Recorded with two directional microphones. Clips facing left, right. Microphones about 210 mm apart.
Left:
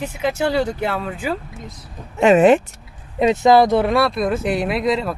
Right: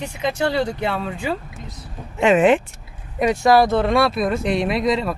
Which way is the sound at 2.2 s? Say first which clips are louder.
Left 3 dB; 40° left (ahead or behind).